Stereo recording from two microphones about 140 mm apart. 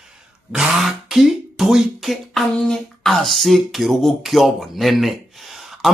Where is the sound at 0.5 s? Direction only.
5° right (ahead or behind).